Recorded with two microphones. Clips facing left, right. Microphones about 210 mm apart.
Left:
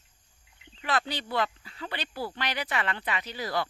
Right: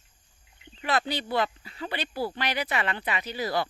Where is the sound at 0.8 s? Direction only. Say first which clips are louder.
Right 3 dB; 10° right (ahead or behind).